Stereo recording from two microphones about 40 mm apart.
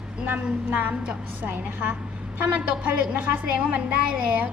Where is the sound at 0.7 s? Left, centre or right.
Right.